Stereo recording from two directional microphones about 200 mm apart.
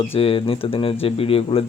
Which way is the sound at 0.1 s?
30° left (ahead or behind).